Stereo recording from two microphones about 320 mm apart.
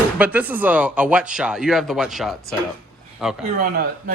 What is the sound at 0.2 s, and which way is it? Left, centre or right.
Speech, centre.